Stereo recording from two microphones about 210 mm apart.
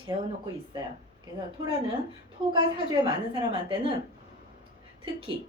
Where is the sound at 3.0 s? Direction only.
25° right (ahead or behind).